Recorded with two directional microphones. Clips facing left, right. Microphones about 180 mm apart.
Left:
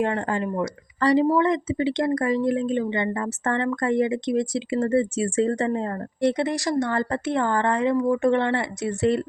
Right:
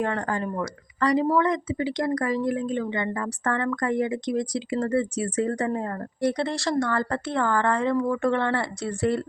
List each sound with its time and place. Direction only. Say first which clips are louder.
0.0 s speech: left 2 dB; 25° left (ahead or behind)
0.9 s speech: left 3 dB; 30° left (ahead or behind)